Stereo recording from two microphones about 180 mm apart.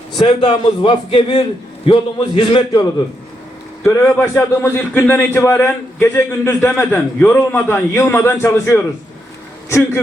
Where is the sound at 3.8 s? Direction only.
10° left (ahead or behind).